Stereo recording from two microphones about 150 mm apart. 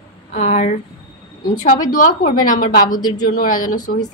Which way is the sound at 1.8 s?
60° left (ahead or behind).